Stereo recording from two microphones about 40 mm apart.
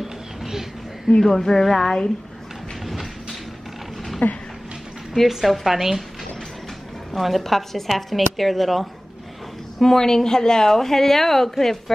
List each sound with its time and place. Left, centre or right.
0.0 s a sound: centre
1.1 s a woman's voice: centre
2.8 s train: centre
4.2 s speech: left
5.3 s a woman's voice: centre
7.2 s a woman's voice: centre
9.8 s a woman's voice: centre